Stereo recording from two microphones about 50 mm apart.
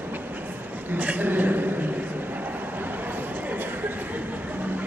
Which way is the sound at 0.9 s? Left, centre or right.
Right.